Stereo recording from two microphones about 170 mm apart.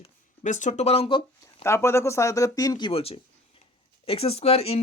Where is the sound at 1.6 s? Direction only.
15° left (ahead or behind).